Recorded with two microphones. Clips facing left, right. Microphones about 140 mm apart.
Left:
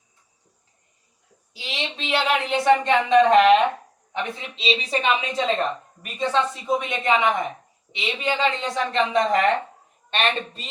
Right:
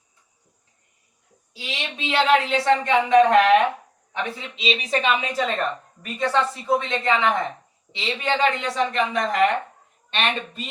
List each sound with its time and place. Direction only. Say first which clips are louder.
1.5 s a woman's voice: left 1 dB; 20° left (ahead or behind)
4.5 s a woman's voice: even; 30° left (ahead or behind)